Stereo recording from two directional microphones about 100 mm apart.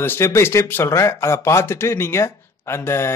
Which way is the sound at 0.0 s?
25° left (ahead or behind).